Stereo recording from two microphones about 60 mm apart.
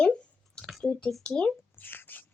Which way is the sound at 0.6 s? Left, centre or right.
Centre.